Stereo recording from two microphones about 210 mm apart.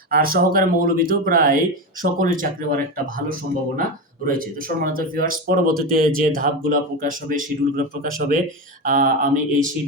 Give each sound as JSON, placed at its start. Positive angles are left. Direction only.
{"t": 0.1, "sound": "speech", "side_deg": -45}
{"t": 4.3, "sound": "speech", "side_deg": -40}